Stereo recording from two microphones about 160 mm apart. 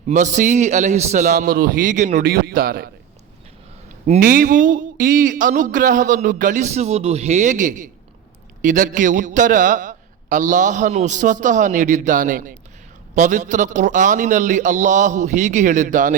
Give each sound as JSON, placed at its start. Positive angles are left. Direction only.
{"t": 0.1, "sound": "a man's voice", "side_deg": -50}
{"t": 4.2, "sound": "a sound", "side_deg": -60}
{"t": 8.6, "sound": "a man's voice", "side_deg": -55}